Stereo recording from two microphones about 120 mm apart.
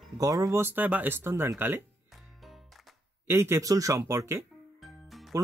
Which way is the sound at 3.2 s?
20° right (ahead or behind).